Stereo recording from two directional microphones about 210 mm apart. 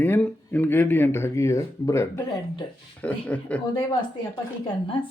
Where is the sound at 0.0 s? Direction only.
10° left (ahead or behind).